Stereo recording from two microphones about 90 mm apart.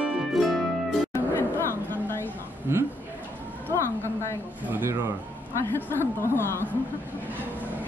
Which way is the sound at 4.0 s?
30° left (ahead or behind).